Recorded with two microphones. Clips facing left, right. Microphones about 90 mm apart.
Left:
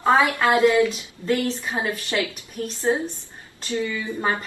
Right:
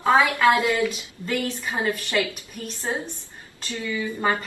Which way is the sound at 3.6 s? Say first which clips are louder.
Left 2 dB; 25° left (ahead or behind).